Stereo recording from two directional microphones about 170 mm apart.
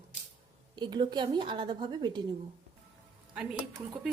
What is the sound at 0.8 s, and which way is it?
A woman's voice, 25° right (ahead or behind).